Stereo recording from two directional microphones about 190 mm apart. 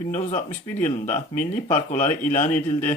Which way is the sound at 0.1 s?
40° left (ahead or behind).